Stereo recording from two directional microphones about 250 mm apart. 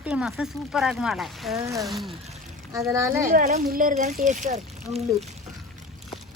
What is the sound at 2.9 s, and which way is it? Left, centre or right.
Speech, centre.